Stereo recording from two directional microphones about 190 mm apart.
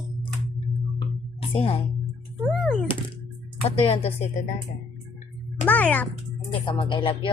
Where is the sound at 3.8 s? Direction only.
30° left (ahead or behind).